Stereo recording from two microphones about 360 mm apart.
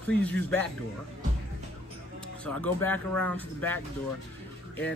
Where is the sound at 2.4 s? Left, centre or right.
Centre.